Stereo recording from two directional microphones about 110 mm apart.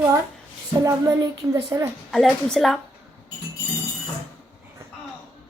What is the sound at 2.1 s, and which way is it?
Speech, 5° left (ahead or behind).